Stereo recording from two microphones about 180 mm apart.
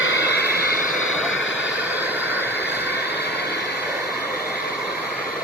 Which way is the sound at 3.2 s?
65° left (ahead or behind).